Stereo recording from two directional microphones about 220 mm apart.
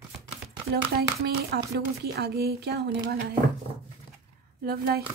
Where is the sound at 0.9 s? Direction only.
45° right (ahead or behind).